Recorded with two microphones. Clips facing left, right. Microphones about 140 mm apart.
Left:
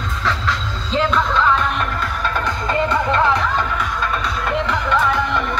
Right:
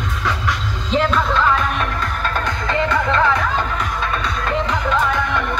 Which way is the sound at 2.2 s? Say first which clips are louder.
Left 1 dB; 5° left (ahead or behind).